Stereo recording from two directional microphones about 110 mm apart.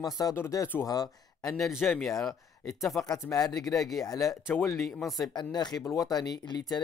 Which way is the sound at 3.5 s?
Centre (ahead or behind).